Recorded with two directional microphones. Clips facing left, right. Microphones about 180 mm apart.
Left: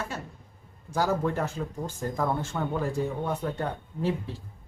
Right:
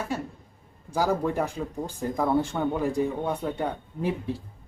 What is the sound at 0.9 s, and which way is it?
Speech, 10° right (ahead or behind).